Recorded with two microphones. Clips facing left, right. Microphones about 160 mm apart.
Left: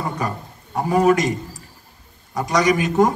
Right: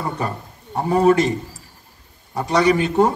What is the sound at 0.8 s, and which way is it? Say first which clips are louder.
Speech: right 1 dB; 30° right (ahead or behind).